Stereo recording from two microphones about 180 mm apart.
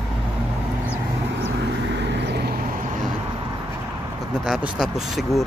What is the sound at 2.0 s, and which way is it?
Vehicle, 70° right (ahead or behind).